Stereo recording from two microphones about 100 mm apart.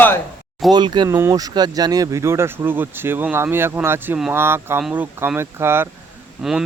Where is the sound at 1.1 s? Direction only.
25° right (ahead or behind).